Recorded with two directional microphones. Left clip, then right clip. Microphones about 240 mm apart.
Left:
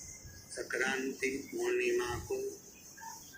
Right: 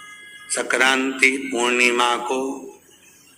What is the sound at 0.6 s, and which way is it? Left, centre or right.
Speech, right.